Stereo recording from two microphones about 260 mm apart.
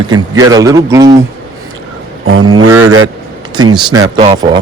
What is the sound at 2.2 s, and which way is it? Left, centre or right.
Speech, right.